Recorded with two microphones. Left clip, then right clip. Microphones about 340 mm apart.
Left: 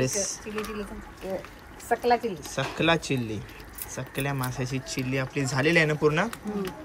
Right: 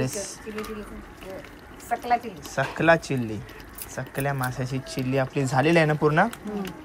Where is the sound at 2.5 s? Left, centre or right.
Centre.